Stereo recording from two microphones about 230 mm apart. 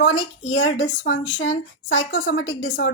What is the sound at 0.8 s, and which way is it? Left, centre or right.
A woman's voice, left.